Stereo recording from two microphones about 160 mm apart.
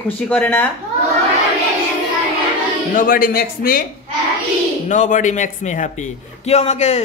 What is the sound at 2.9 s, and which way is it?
Speech, 60° left (ahead or behind).